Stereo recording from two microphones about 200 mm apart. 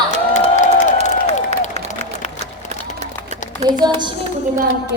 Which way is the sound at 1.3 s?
35° left (ahead or behind).